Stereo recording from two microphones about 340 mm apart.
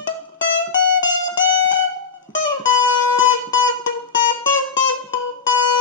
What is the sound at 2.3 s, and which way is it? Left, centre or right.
Music, left.